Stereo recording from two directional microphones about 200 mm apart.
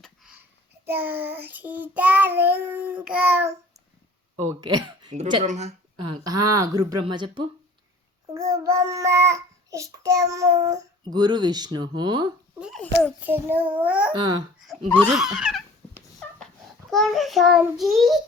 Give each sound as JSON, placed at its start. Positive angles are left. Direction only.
{"t": 0.0, "sound": "a sound", "side_deg": -5}
{"t": 0.9, "sound": "child singing", "side_deg": -10}
{"t": 4.4, "sound": "speech", "side_deg": -20}
{"t": 5.1, "sound": "speech", "side_deg": -35}
{"t": 6.2, "sound": "speech", "side_deg": -20}
{"t": 8.3, "sound": "child singing", "side_deg": -15}
{"t": 11.0, "sound": "speech", "side_deg": -20}
{"t": 12.5, "sound": "a child's voice", "side_deg": -5}
{"t": 13.1, "sound": "child singing", "side_deg": -10}
{"t": 14.1, "sound": "speech", "side_deg": -25}
{"t": 14.7, "sound": "a child's voice", "side_deg": 5}
{"t": 15.0, "sound": "a sound", "side_deg": 0}
{"t": 16.9, "sound": "a child's voice", "side_deg": 0}